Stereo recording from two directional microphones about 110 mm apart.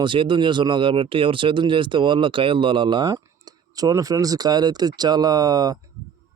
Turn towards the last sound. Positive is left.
turn(degrees=-35)  # may be behind; listen again after turning